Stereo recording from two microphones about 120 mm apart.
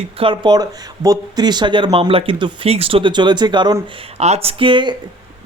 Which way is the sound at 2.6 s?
55° right (ahead or behind).